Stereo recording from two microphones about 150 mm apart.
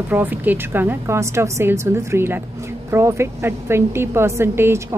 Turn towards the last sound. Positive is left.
turn(degrees=-15)  # may be behind; listen again after turning